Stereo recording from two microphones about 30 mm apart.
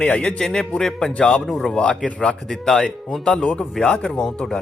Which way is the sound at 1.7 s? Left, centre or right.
Left.